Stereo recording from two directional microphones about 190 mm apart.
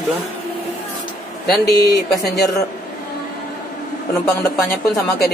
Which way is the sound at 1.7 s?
20° left (ahead or behind).